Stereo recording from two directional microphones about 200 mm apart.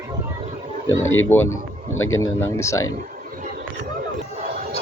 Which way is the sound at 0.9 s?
75° left (ahead or behind).